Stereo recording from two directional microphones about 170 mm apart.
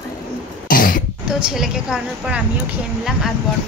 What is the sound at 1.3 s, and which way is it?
A woman's voice, 5° right (ahead or behind).